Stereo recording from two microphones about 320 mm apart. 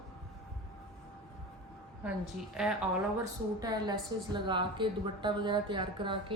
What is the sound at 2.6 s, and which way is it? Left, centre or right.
A woman's voice, centre.